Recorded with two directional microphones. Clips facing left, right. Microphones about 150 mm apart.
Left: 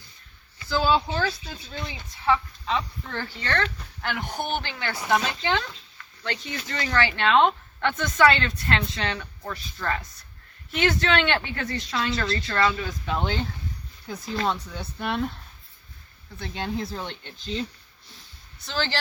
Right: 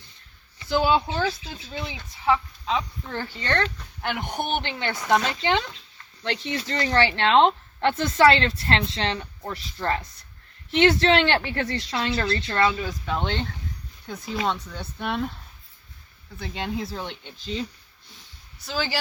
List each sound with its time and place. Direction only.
0.6 s speech: 20° right (ahead or behind)
5.1 s speech: 5° left (ahead or behind)
5.4 s speech: 20° right (ahead or behind)
12.9 s speech: 5° left (ahead or behind)
16.4 s speech: centre (ahead or behind)
18.2 s a sound: 5° right (ahead or behind)